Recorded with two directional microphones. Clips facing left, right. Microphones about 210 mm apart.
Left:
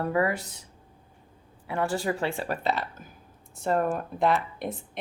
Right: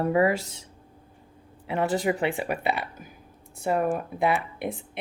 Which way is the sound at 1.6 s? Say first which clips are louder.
Right 3 dB; 20° right (ahead or behind).